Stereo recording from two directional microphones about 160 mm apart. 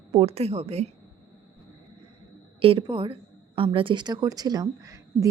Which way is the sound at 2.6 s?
35° right (ahead or behind).